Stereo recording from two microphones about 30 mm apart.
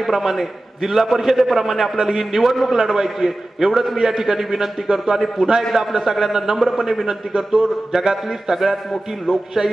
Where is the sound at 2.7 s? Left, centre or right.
Right.